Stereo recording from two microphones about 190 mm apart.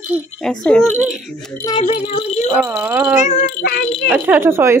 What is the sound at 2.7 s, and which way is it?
Speech, 5° right (ahead or behind).